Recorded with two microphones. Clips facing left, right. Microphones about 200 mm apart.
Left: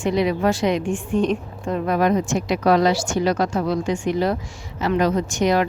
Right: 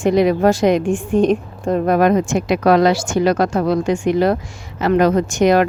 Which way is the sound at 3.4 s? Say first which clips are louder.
Right 5 dB; 80° right.